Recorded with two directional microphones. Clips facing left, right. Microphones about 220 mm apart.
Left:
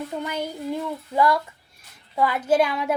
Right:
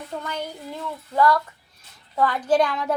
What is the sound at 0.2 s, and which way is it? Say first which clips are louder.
Speech: left 2 dB; 15° left (ahead or behind).